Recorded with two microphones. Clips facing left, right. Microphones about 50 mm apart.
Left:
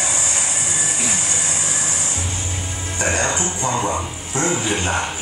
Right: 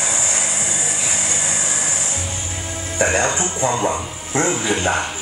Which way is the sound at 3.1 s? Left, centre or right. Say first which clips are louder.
Right 2 dB; centre.